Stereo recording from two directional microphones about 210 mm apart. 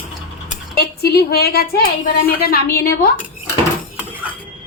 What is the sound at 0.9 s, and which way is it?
A woman's voice, 50° left (ahead or behind).